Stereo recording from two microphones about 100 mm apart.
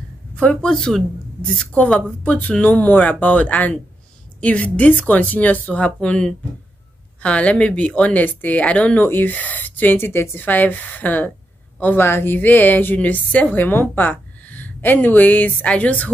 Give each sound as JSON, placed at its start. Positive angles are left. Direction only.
{"t": 0.4, "sound": "a woman's voice", "side_deg": 10}